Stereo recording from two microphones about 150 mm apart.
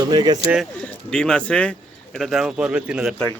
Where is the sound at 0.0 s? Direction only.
30° right (ahead or behind).